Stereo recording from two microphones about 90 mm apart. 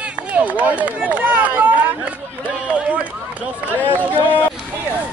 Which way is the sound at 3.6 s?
20° left (ahead or behind).